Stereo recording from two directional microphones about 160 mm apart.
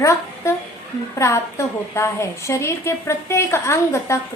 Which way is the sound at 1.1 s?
20° left (ahead or behind).